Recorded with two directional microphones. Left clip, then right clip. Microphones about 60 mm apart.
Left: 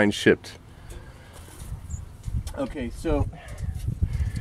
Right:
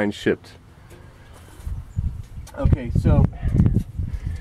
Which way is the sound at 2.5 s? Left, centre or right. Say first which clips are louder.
Right 3 dB; left.